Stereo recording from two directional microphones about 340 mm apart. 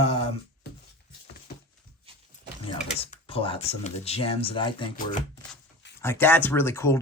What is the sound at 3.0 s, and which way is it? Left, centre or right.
Speech, centre.